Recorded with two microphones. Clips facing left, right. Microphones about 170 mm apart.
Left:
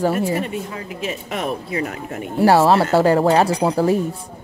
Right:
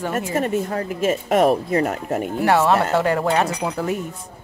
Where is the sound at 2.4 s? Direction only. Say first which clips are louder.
Left 4 dB; 35° left (ahead or behind).